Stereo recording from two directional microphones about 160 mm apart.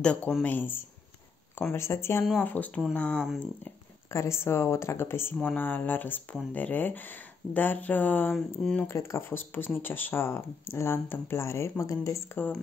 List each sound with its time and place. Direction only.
0.0 s speech: 5° left (ahead or behind)